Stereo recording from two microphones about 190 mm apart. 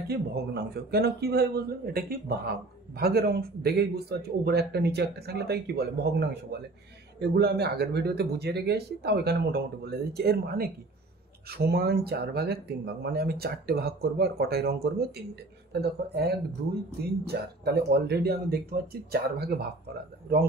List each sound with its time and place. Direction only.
0.1 s speech: 60° right (ahead or behind)